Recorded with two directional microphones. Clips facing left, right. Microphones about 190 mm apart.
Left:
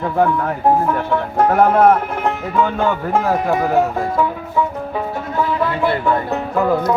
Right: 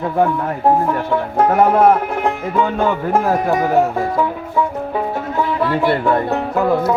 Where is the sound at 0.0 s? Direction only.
5° right (ahead or behind).